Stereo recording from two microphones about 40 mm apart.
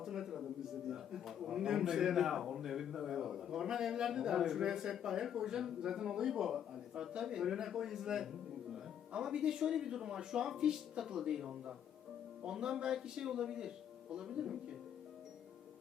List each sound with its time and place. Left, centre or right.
0.0 s a man's voice: centre